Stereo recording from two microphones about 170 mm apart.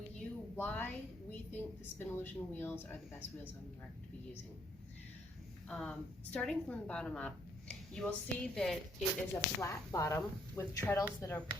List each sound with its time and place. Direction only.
0.2 s a sound: 10° left (ahead or behind)
1.3 s speech: 15° left (ahead or behind)
5.6 s a woman's voice: 5° left (ahead or behind)
9.6 s speech: 20° left (ahead or behind)